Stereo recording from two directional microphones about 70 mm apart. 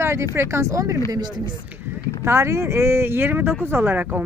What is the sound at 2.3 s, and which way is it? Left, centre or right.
Speech, right.